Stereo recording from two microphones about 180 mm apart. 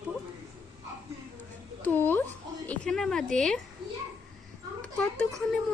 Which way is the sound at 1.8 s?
10° left (ahead or behind).